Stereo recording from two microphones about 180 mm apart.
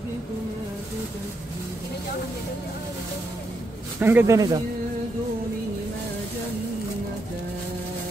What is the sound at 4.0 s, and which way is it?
Speech, 10° right (ahead or behind).